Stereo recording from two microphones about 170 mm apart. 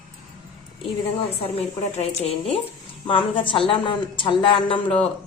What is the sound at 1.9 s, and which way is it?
A woman's voice, 35° left (ahead or behind).